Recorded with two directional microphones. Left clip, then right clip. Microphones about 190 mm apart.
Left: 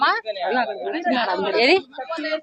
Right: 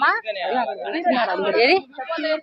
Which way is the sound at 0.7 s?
45° right (ahead or behind).